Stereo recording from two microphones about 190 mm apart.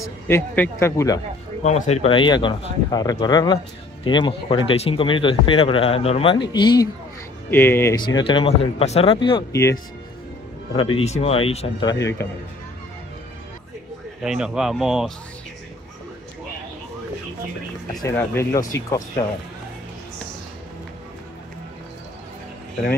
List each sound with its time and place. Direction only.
0.0 s speech: 15° left (ahead or behind)
1.6 s speech: 35° left (ahead or behind)
7.5 s speech: 10° left (ahead or behind)
8.0 s speech: 25° left (ahead or behind)
9.5 s speech: 15° left (ahead or behind)
11.1 s speech: 30° left (ahead or behind); by 12.3 s 15° left (ahead or behind)
14.2 s speech: 5° right (ahead or behind)
18.0 s speech: 15° left (ahead or behind)